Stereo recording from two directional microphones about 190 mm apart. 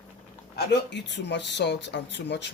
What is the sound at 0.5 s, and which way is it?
Speech, 60° left (ahead or behind).